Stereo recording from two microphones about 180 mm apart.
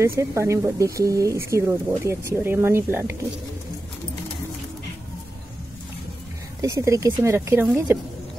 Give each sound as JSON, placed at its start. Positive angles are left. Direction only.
{"t": 0.0, "sound": "speech", "side_deg": -15}
{"t": 6.6, "sound": "speech", "side_deg": -15}